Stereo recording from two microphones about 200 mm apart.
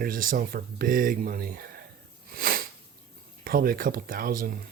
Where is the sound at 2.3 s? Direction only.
50° right (ahead or behind).